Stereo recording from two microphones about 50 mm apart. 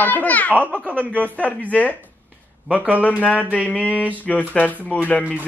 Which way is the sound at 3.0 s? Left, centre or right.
Left.